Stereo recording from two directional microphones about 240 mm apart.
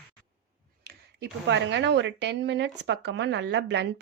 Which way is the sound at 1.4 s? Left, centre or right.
Right.